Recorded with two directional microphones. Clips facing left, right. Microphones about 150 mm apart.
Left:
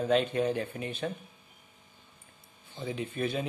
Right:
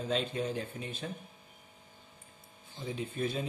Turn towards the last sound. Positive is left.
turn(degrees=65)  # may be behind; listen again after turning